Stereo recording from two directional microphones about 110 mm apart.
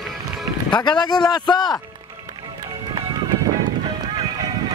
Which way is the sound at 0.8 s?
40° left (ahead or behind).